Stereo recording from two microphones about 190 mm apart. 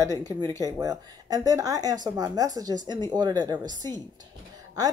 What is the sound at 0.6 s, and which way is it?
Speech, 20° right (ahead or behind).